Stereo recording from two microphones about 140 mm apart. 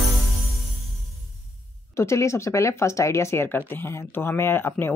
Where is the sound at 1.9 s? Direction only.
20° left (ahead or behind).